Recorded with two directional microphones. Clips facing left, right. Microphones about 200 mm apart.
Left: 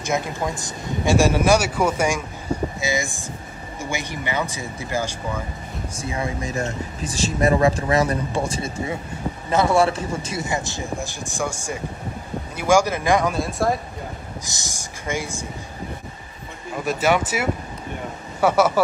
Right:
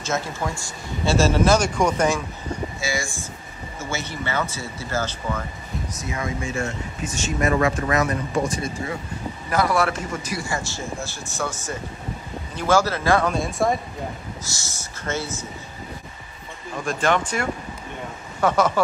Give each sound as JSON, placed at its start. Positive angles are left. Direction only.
{"t": 0.0, "sound": "speech", "side_deg": 15}
{"t": 5.9, "sound": "speech", "side_deg": 30}
{"t": 13.3, "sound": "speech", "side_deg": 0}
{"t": 14.4, "sound": "speech", "side_deg": 15}
{"t": 16.7, "sound": "speech", "side_deg": 5}